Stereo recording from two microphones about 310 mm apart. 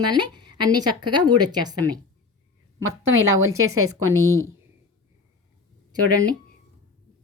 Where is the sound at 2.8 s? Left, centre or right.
Right.